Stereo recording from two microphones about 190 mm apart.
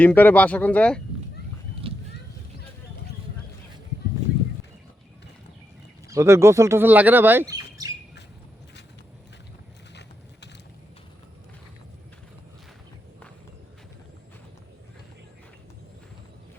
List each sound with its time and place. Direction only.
0.0 s speech: 10° left (ahead or behind)
1.8 s a sound: 30° right (ahead or behind)
6.1 s speech: 15° right (ahead or behind)